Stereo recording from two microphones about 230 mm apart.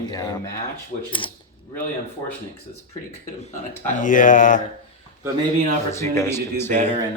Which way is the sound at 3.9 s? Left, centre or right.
Left.